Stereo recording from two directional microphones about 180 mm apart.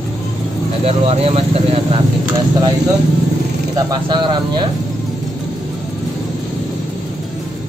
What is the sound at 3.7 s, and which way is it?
Speech, 25° right (ahead or behind).